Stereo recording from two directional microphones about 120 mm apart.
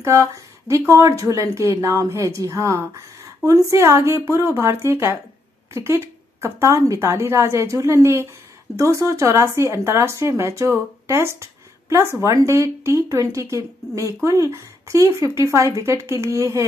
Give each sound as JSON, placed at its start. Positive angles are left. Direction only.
{"t": 0.0, "sound": "speech", "side_deg": -25}